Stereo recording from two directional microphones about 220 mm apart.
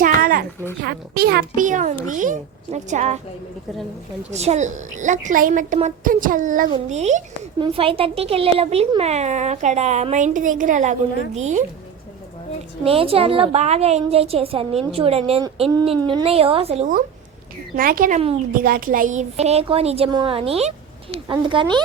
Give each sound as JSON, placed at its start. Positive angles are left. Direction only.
{"t": 0.0, "sound": "a sound", "side_deg": -40}
{"t": 0.8, "sound": "a child's voice", "side_deg": -45}
{"t": 4.3, "sound": "a woman's voice", "side_deg": -30}
{"t": 12.8, "sound": "a child's voice", "side_deg": -25}
{"t": 17.7, "sound": "a woman's voice", "side_deg": -40}